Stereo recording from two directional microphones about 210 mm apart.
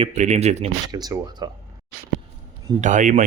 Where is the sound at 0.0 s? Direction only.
30° right (ahead or behind).